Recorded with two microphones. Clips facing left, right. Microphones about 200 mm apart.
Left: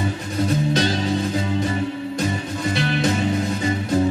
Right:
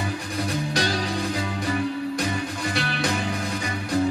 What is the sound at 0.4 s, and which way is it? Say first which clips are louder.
Music: left 7 dB; 20° left (ahead or behind).